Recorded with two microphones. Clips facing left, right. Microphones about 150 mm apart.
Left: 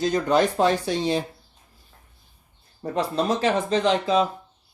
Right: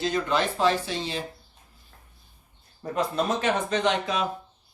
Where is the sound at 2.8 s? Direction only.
30° left (ahead or behind).